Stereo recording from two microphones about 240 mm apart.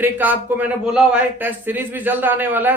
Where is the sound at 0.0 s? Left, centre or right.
Centre.